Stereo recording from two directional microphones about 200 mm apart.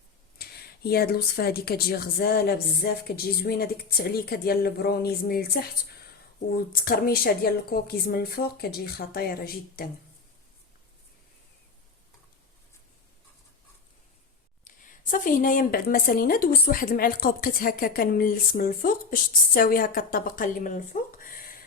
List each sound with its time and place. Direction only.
0.3 s a woman's voice: 50° left (ahead or behind)
15.1 s a woman's voice: 40° left (ahead or behind)